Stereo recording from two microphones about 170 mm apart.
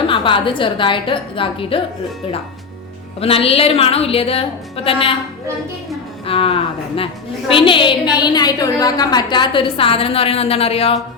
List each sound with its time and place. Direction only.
0.1 s a woman's voice: 30° left (ahead or behind)
3.2 s a woman's voice: 35° left (ahead or behind)
6.2 s a woman's voice: 35° left (ahead or behind)